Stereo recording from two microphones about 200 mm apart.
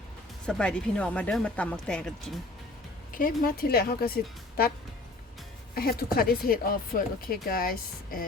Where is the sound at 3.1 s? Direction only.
45° left (ahead or behind).